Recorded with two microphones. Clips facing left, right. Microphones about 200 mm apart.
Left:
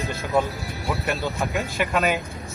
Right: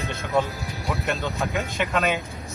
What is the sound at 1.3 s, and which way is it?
Speech, centre (ahead or behind).